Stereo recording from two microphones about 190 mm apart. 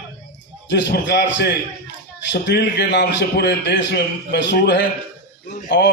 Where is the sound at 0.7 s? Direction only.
65° left (ahead or behind).